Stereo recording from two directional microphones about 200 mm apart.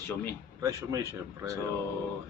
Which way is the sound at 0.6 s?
15° right (ahead or behind).